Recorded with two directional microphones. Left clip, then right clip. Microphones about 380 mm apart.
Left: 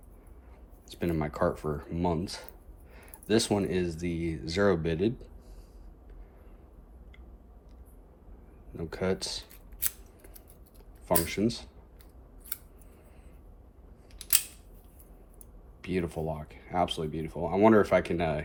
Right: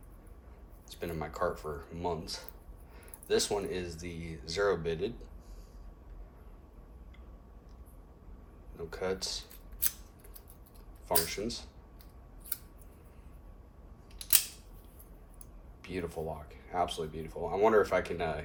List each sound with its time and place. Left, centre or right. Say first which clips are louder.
0.9 s speech: left 6 dB; left
8.7 s speech: left 4 dB; left
11.3 s speech: left 6 dB; left
15.8 s speech: left 5 dB; left